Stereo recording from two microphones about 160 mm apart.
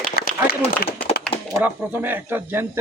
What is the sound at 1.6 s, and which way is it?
Speech, 10° right (ahead or behind).